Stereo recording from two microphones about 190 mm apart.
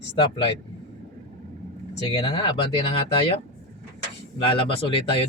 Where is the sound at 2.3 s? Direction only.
30° left (ahead or behind).